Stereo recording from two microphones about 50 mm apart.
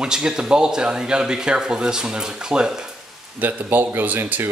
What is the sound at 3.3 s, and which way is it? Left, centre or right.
Speech, right.